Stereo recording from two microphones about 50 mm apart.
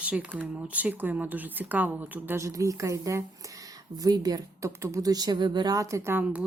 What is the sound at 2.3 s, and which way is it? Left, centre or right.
A woman's voice, right.